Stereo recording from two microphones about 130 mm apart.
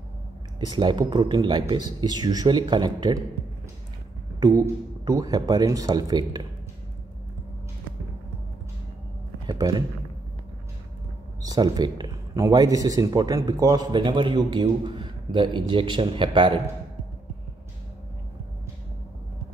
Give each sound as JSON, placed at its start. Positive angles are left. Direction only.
{"t": 0.6, "sound": "speech", "side_deg": -35}
{"t": 4.4, "sound": "speech", "side_deg": -30}
{"t": 9.5, "sound": "a man's voice", "side_deg": -30}
{"t": 11.4, "sound": "speech", "side_deg": -30}